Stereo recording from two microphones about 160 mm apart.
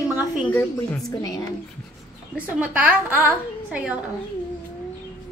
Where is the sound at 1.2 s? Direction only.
20° left (ahead or behind).